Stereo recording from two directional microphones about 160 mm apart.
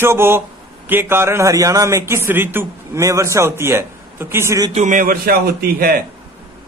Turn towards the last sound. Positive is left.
turn(degrees=-70)  # may be behind; listen again after turning